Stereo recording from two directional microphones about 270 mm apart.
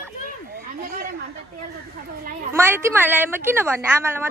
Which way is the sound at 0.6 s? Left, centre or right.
Right.